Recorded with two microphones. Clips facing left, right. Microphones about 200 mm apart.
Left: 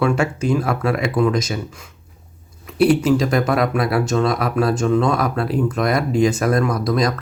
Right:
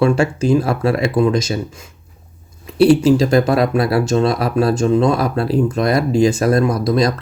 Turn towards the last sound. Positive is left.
turn(degrees=-30)  # may be behind; listen again after turning